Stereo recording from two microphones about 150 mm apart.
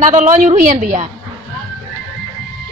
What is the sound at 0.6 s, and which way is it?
Speech, 60° right (ahead or behind).